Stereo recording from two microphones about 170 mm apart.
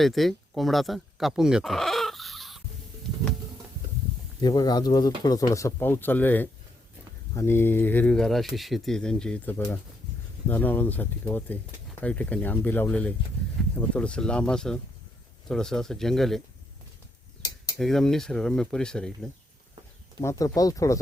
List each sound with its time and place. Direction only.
0.0 s speech: centre (ahead or behind)
4.4 s speech: 25° left (ahead or behind); by 16.4 s centre (ahead or behind)
17.7 s speech: centre (ahead or behind)
20.2 s speech: 20° left (ahead or behind)